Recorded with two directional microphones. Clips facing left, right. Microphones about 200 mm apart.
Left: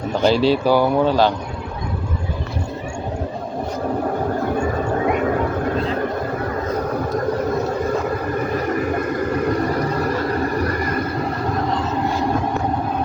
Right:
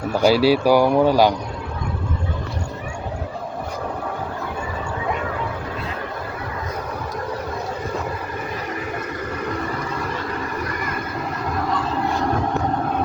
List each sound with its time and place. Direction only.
0.1 s speech: 10° right (ahead or behind)
4.5 s a sound: 50° left (ahead or behind)
8.5 s vehicle: 45° left (ahead or behind)